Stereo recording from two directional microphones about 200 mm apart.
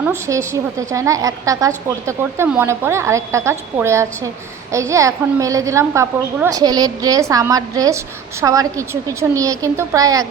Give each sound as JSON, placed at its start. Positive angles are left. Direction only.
{"t": 0.0, "sound": "a woman's voice", "side_deg": -15}